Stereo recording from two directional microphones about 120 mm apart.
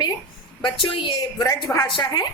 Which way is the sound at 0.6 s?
45° left (ahead or behind).